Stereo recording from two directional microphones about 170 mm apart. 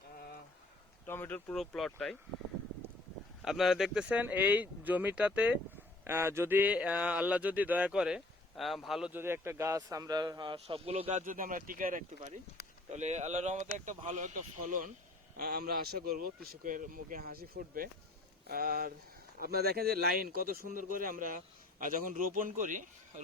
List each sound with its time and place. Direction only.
1.0 s speech: 10° left (ahead or behind)
1.5 s speech: centre (ahead or behind)
3.4 s speech: centre (ahead or behind); by 11.2 s 35° right (ahead or behind)
11.3 s speech: 55° right (ahead or behind)
15.4 s speech: 60° right (ahead or behind)